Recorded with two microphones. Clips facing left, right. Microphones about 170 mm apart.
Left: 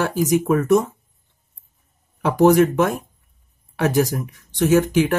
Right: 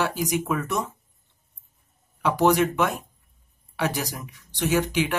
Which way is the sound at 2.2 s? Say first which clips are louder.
Left 6 dB; 45° left (ahead or behind).